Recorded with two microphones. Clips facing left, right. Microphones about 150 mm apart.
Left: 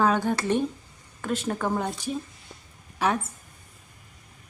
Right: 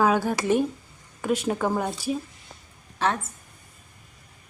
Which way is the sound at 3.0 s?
10° left (ahead or behind).